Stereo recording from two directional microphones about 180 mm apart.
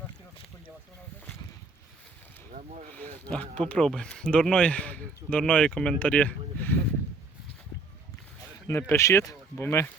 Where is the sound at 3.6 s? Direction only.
5° left (ahead or behind).